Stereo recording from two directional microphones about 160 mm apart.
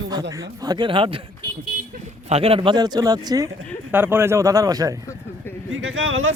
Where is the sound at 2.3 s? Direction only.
40° right (ahead or behind); by 5.0 s 20° right (ahead or behind).